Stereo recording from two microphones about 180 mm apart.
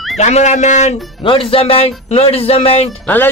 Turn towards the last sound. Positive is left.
turn(degrees=10)  # may be behind; listen again after turning